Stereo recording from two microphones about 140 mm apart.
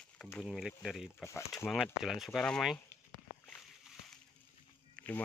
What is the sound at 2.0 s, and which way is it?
Speech, centre (ahead or behind).